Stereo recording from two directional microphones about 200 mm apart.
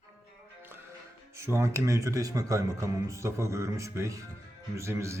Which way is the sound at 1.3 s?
15° right (ahead or behind).